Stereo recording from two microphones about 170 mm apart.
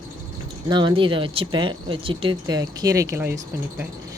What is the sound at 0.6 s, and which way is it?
Speech, 25° right (ahead or behind).